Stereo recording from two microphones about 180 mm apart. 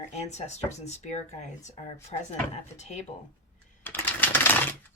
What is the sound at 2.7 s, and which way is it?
Speech, 40° left (ahead or behind).